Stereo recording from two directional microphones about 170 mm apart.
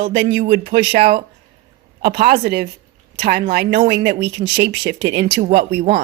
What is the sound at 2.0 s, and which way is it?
Speech, 65° right (ahead or behind).